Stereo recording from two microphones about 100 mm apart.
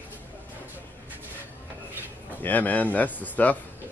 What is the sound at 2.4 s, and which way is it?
Speech, 15° left (ahead or behind).